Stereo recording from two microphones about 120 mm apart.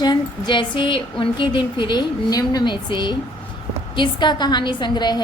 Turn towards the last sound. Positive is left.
turn(degrees=35)  # may be behind; listen again after turning